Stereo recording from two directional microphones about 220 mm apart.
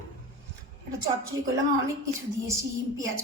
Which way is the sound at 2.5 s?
15° right (ahead or behind).